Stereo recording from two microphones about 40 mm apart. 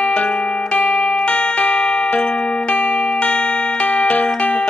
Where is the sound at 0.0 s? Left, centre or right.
Left.